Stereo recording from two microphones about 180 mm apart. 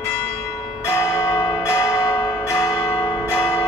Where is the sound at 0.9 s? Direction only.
15° left (ahead or behind).